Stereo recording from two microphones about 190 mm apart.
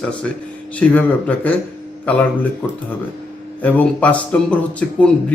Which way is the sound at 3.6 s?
10° left (ahead or behind).